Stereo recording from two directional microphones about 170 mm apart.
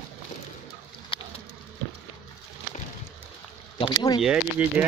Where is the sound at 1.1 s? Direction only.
30° left (ahead or behind).